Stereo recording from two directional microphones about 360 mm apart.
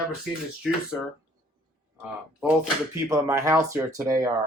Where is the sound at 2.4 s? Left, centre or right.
Centre.